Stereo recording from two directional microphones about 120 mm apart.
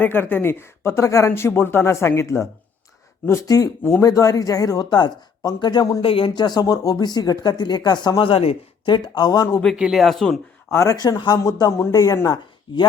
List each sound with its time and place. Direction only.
0.0 s speech: 15° left (ahead or behind); by 6.0 s 35° left (ahead or behind)
6.0 s speech: 45° left (ahead or behind)
8.2 s speech: 50° left (ahead or behind)
8.9 s speech: 35° left (ahead or behind)
9.7 s speech: 5° right (ahead or behind)
10.7 s speech: 25° left (ahead or behind)
10.9 s speech: 35° left (ahead or behind)